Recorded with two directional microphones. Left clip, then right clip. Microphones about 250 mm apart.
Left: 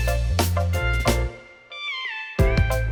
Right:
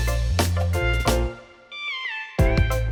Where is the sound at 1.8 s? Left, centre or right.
Left.